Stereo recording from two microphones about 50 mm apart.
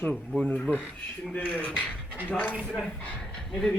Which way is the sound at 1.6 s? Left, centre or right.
Left.